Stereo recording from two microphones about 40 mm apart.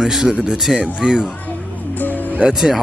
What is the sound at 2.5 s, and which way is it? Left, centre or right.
Speech, centre.